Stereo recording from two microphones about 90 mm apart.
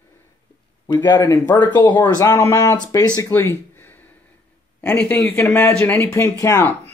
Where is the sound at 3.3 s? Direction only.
25° left (ahead or behind).